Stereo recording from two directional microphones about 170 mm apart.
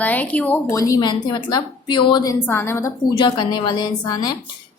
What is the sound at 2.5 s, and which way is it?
Speech, 15° left (ahead or behind).